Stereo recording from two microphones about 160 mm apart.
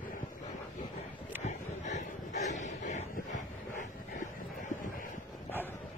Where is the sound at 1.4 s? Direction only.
45° left (ahead or behind).